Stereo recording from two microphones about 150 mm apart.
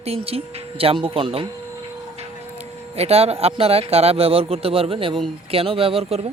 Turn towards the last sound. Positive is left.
turn(degrees=-45)  # may be behind; listen again after turning